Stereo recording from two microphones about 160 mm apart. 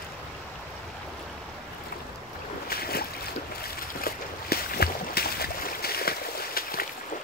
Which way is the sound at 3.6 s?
70° left (ahead or behind).